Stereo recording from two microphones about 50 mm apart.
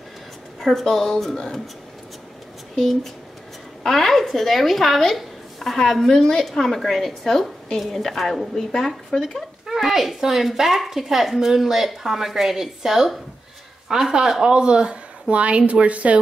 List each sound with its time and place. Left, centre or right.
0.6 s speech: centre
2.7 s speech: centre
9.7 s speech: centre; by 16.2 s right